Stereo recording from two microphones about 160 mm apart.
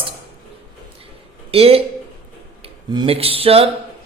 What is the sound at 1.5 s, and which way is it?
Speech, 40° right (ahead or behind).